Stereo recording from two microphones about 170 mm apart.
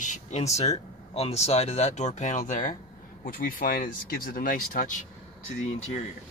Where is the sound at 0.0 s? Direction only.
45° left (ahead or behind).